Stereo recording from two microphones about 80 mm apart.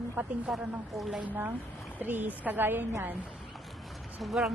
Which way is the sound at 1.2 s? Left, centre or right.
Right.